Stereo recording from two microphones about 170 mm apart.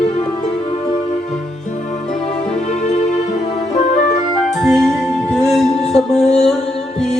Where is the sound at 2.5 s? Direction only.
40° left (ahead or behind).